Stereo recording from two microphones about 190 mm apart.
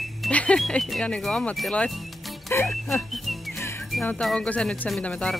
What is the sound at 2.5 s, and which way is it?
Music, 15° left (ahead or behind).